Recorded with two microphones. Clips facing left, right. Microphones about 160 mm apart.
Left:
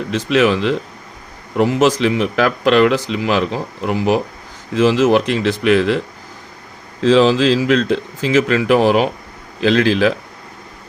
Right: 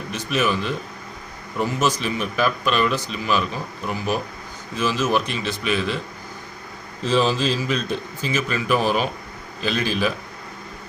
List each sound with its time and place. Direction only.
0.1 s a man's voice: 85° left
7.0 s a man's voice: 90° left
9.6 s a man's voice: 90° left